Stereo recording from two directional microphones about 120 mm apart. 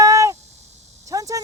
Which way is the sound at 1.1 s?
30° right (ahead or behind).